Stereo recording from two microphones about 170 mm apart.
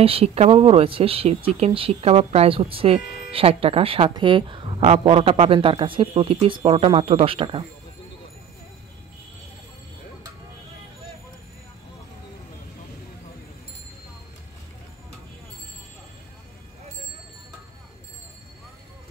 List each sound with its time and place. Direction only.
0.0 s speech: 35° right (ahead or behind)